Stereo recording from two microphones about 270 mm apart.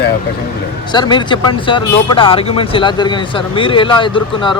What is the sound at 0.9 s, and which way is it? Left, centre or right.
Speech, centre.